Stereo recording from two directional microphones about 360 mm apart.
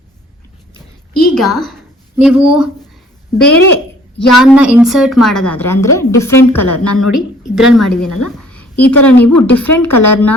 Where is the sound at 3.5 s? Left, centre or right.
Left.